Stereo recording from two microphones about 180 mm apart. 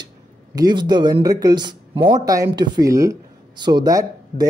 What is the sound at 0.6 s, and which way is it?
Speech, 25° right (ahead or behind).